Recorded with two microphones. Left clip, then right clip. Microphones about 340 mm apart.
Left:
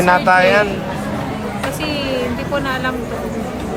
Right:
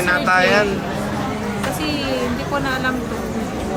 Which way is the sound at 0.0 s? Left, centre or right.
Centre.